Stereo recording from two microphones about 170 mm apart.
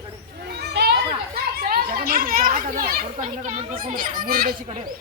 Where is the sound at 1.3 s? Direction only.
60° right (ahead or behind).